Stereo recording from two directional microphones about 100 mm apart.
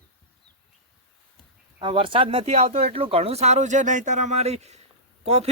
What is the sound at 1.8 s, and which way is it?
Speech, 60° right (ahead or behind).